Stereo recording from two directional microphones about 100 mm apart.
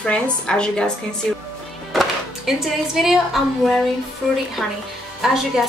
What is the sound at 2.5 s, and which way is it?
Speech, 5° right (ahead or behind).